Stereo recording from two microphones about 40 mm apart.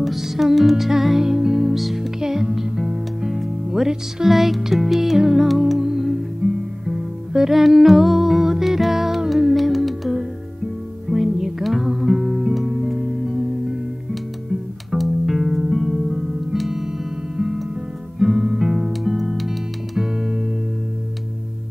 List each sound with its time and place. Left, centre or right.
0.0 s music: centre
6.4 s music: right
6.9 s music: centre
14.9 s music: centre
18.2 s guitar: centre
18.9 s music: centre